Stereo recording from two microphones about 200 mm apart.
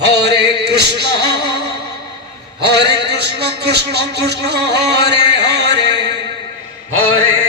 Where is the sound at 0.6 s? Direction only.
55° right (ahead or behind).